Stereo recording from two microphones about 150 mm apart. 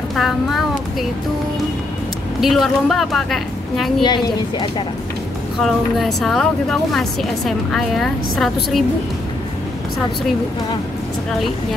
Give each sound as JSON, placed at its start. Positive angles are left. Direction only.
{"t": 0.1, "sound": "a child's voice", "side_deg": 0}
{"t": 2.4, "sound": "a woman's voice", "side_deg": 0}
{"t": 4.0, "sound": "a woman's voice", "side_deg": 30}
{"t": 5.6, "sound": "a woman's voice", "side_deg": 0}